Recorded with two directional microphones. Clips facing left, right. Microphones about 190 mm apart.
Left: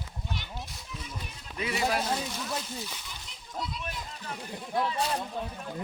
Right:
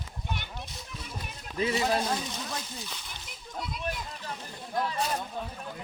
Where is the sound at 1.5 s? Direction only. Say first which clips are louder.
Right 5 dB; 30° right (ahead or behind).